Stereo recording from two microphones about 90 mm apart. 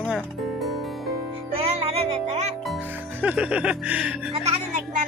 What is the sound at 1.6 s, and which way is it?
Music, 90° right.